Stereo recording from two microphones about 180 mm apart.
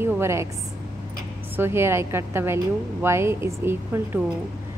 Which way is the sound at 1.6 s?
15° right (ahead or behind).